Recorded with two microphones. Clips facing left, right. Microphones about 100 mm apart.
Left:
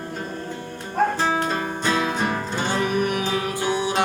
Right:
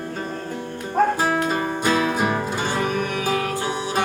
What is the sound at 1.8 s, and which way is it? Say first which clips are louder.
Music: right 2 dB; 10° right (ahead or behind).